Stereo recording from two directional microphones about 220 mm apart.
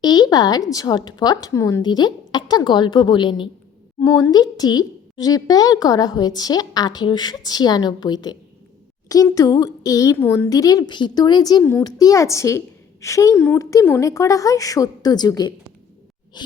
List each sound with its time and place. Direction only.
0.0 s a woman's voice: 20° left (ahead or behind)